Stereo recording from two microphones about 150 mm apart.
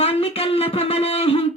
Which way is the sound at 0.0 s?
40° left (ahead or behind).